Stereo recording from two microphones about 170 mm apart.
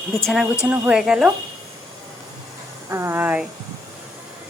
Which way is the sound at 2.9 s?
15° right (ahead or behind).